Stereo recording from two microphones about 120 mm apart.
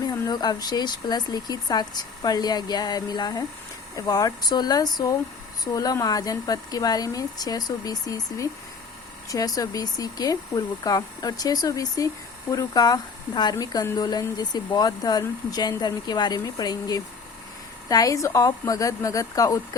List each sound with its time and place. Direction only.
0.1 s a woman's voice: 35° left (ahead or behind)